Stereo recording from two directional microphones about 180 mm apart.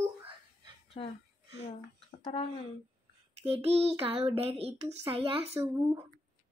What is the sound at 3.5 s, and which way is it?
A woman's voice, 30° right (ahead or behind).